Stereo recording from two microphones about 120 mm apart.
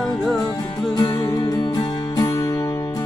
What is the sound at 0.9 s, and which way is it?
Music, 35° left (ahead or behind).